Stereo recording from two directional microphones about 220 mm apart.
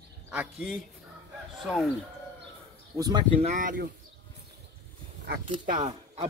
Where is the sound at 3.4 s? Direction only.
35° right (ahead or behind).